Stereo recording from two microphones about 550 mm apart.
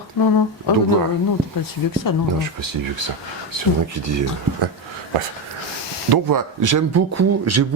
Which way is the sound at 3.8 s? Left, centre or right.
Right.